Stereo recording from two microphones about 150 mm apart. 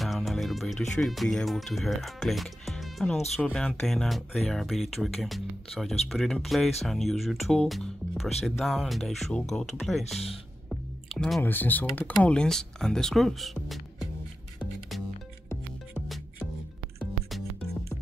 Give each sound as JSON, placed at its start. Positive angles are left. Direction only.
{"t": 0.0, "sound": "speech", "side_deg": 0}
{"t": 10.7, "sound": "squish", "side_deg": 0}
{"t": 11.4, "sound": "speech", "side_deg": 10}